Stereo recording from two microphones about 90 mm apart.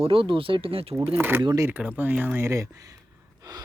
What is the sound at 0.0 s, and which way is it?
Speech, 85° right.